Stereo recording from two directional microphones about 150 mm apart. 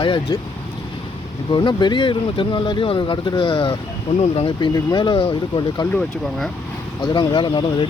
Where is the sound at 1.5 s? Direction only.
30° left (ahead or behind).